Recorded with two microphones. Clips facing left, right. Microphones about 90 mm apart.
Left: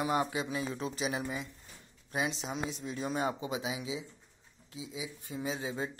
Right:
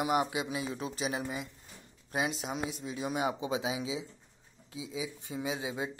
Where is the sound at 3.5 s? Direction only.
25° right (ahead or behind).